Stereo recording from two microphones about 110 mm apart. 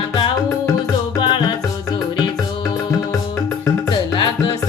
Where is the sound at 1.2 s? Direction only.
45° left (ahead or behind).